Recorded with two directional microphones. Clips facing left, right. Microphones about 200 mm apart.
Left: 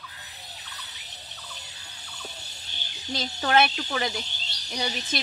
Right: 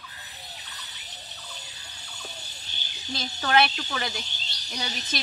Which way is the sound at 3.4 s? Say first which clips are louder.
Left 1 dB; 15° left (ahead or behind).